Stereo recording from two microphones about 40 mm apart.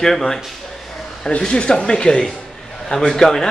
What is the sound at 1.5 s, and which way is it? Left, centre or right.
A man's voice, left.